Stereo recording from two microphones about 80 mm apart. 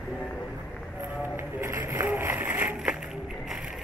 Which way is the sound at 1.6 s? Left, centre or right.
Right.